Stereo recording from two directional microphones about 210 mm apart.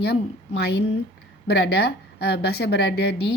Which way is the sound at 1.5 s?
50° left (ahead or behind).